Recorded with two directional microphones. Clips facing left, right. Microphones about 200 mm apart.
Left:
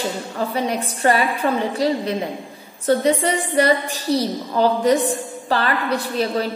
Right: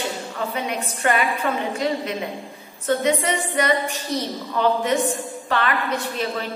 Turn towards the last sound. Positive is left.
turn(degrees=35)  # may be behind; listen again after turning